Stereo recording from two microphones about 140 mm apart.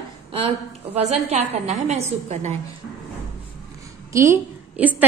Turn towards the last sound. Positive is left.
turn(degrees=-10)  # may be behind; listen again after turning